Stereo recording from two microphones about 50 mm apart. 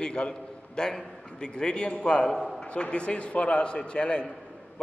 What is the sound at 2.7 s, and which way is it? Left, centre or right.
A man's voice, left.